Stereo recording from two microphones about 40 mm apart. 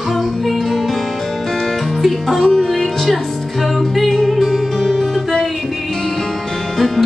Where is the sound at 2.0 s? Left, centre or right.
Centre.